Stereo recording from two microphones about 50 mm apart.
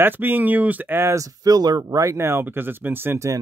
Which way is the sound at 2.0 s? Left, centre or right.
Right.